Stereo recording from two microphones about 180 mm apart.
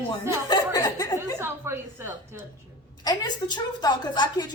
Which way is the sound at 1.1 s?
15° right (ahead or behind).